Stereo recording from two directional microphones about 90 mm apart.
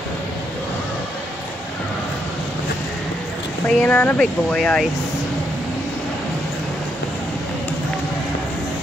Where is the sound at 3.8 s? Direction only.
20° left (ahead or behind).